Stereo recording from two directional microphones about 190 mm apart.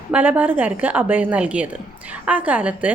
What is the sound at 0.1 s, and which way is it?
A woman's voice, 10° right (ahead or behind).